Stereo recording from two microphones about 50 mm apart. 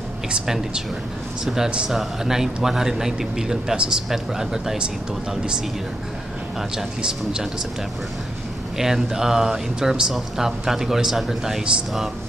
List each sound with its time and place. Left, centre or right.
1.4 s speech: centre
3.7 s speech: right
4.1 s speech: centre
7.0 s speech: centre
8.7 s speech: centre